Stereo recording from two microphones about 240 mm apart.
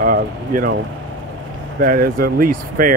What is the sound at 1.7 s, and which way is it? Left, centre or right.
Speech, right.